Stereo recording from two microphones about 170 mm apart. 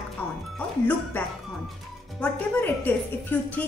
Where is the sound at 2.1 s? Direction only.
10° left (ahead or behind).